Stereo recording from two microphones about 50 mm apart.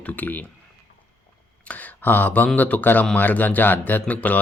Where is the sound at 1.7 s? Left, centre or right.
Left.